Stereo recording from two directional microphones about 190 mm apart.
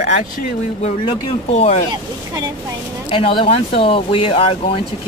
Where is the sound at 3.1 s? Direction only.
30° left (ahead or behind).